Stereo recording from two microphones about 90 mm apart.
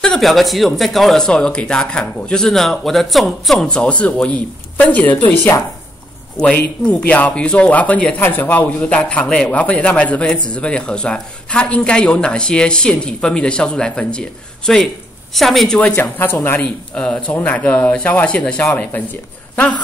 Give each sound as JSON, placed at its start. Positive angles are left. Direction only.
{"t": 0.0, "sound": "a man's voice", "side_deg": 5}
{"t": 6.9, "sound": "a man's voice", "side_deg": 15}
{"t": 15.8, "sound": "speech", "side_deg": 25}
{"t": 16.6, "sound": "a man's voice", "side_deg": 10}